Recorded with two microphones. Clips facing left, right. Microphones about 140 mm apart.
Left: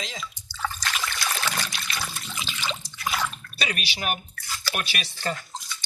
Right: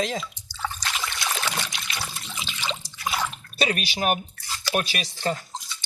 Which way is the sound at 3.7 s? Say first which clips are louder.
Right 4 dB; 40° right (ahead or behind).